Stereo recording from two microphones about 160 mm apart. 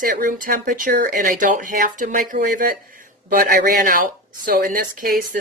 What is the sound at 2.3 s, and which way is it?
Speech, 70° right (ahead or behind).